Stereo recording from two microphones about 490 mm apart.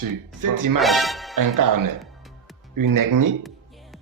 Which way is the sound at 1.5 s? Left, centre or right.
Right.